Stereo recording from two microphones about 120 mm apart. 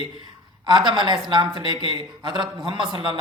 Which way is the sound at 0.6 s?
40° right (ahead or behind).